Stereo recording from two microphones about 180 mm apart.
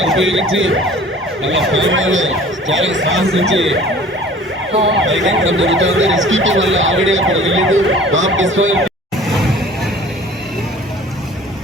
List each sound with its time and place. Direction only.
0.2 s emergency vehicle: 90° right
4.9 s emergency vehicle: 90° right